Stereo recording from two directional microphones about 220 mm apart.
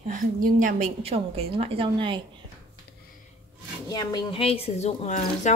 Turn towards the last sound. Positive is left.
turn(degrees=35)  # may be behind; listen again after turning